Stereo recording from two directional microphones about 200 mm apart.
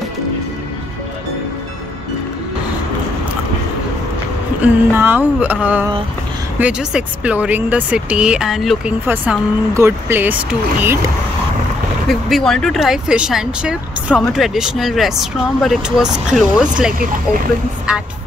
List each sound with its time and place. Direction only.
4.6 s speech: 10° right (ahead or behind)
12.1 s speech: centre (ahead or behind)